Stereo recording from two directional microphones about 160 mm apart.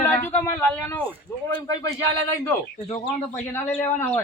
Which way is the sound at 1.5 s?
25° left (ahead or behind).